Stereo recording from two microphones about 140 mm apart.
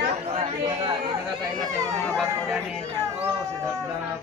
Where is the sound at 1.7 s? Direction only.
20° right (ahead or behind).